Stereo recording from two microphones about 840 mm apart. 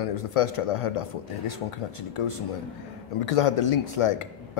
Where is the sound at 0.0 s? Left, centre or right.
Left.